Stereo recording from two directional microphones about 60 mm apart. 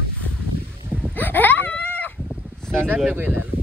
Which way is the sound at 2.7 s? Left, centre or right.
Right.